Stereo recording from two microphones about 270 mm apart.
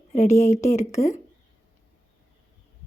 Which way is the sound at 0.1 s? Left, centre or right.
Left.